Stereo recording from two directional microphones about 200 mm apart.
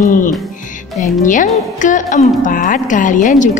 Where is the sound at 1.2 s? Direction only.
40° left (ahead or behind).